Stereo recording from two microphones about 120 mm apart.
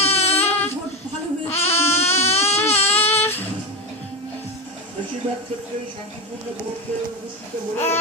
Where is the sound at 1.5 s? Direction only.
60° left (ahead or behind).